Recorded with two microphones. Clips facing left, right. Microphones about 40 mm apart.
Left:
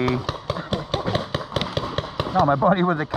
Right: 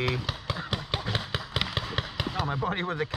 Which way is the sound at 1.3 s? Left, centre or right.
Centre.